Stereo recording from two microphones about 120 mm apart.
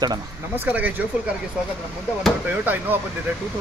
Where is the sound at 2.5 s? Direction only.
15° right (ahead or behind).